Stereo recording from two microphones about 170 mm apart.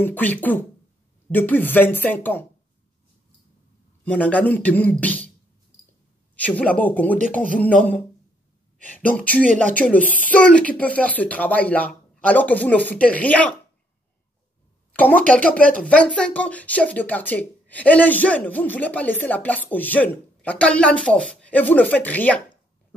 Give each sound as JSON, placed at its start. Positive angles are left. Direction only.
{"t": 0.0, "sound": "speech", "side_deg": 10}
{"t": 4.0, "sound": "speech", "side_deg": 10}
{"t": 6.3, "sound": "speech", "side_deg": 10}
{"t": 9.5, "sound": "speech", "side_deg": -45}
{"t": 9.8, "sound": "speech", "side_deg": 10}
{"t": 14.9, "sound": "speech", "side_deg": 10}